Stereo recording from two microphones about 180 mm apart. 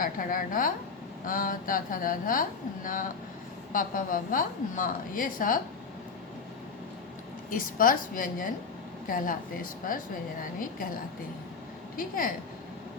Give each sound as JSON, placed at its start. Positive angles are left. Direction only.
{"t": 0.0, "sound": "a woman's voice", "side_deg": 50}
{"t": 7.5, "sound": "a woman's voice", "side_deg": 50}
{"t": 11.9, "sound": "a woman's voice", "side_deg": 50}